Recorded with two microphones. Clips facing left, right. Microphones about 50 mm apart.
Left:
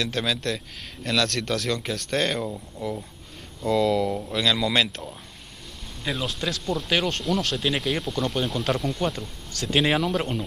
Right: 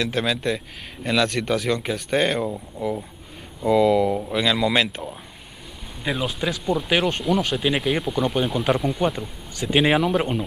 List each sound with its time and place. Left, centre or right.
0.0 s speech: centre